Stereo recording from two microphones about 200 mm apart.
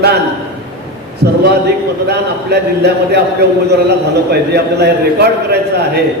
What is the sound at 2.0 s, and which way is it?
A man's voice, 55° right (ahead or behind).